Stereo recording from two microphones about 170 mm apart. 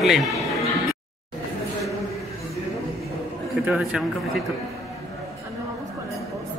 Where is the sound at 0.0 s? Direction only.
Centre (ahead or behind).